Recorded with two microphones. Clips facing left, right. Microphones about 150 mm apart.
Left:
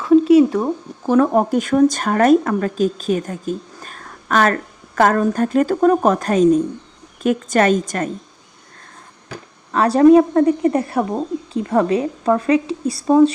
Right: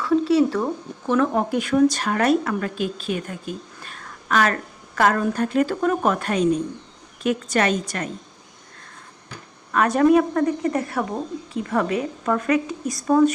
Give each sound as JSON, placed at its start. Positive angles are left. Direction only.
{"t": 0.0, "sound": "a sound", "side_deg": 20}
{"t": 1.0, "sound": "a woman's voice", "side_deg": 35}
{"t": 9.7, "sound": "speech", "side_deg": 30}